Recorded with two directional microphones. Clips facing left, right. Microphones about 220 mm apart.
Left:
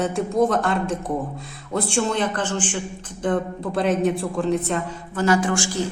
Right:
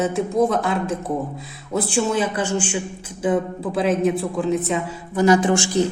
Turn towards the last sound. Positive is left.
turn(degrees=-20)  # may be behind; listen again after turning